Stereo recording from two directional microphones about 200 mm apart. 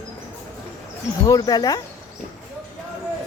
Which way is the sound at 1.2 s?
20° left (ahead or behind).